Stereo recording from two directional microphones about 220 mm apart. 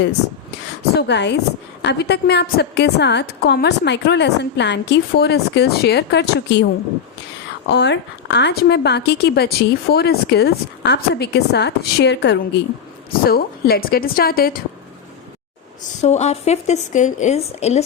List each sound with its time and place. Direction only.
0.9 s a woman's voice: 50° left (ahead or behind)
7.7 s a woman's voice: 50° left (ahead or behind)
15.8 s speech: 30° left (ahead or behind)